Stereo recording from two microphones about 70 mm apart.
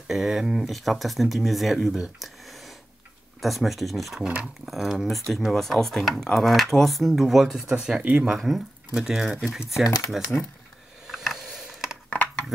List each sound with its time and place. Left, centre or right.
0.1 s speech: centre
3.3 s speech: centre
8.0 s speech: right
8.3 s speech: centre
11.1 s a sound: centre
12.1 s a sound: centre